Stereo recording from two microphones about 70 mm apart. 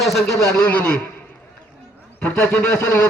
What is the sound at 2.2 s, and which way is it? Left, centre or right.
Speech, centre.